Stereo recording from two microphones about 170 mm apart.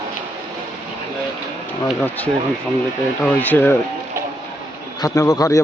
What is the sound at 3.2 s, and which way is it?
Speech, 10° left (ahead or behind).